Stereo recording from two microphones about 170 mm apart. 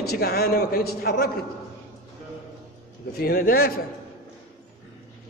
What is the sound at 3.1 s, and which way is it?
Speech, 60° left (ahead or behind).